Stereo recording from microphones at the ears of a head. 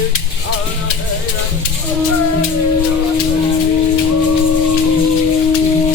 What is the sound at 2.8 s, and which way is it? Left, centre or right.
Music, left.